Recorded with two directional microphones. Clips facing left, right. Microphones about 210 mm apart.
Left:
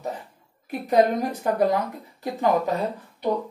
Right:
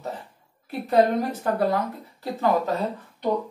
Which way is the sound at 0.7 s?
15° left (ahead or behind).